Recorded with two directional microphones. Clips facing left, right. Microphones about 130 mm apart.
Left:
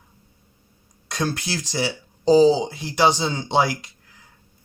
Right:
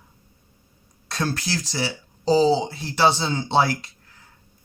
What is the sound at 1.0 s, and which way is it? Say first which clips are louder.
Speech: left 1 dB; 15° left (ahead or behind).